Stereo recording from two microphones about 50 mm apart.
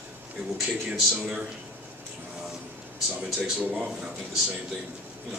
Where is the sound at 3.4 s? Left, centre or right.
Centre.